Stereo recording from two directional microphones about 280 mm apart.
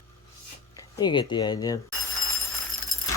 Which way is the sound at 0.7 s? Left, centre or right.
Centre.